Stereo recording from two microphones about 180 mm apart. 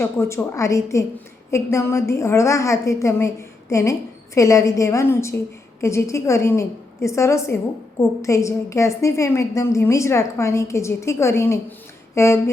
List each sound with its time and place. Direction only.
0.0 s a woman's voice: 15° left (ahead or behind)